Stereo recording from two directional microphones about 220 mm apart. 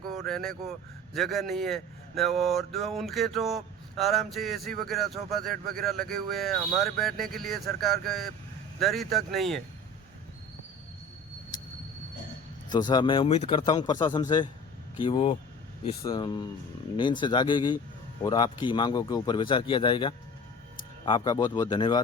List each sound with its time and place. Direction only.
0.3 s speech: centre (ahead or behind)
12.7 s a man's voice: 20° left (ahead or behind)